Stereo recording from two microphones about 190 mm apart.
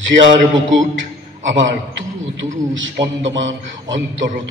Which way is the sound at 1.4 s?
75° right (ahead or behind).